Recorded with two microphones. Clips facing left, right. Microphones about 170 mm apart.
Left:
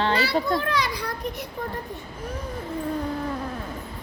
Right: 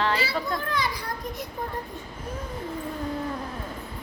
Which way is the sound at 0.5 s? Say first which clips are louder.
Left 3 dB; 80° left.